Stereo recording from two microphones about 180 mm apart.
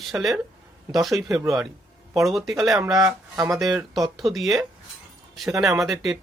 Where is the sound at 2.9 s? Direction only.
20° right (ahead or behind).